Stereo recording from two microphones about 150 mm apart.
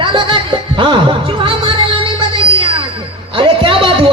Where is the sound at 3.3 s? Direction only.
35° right (ahead or behind).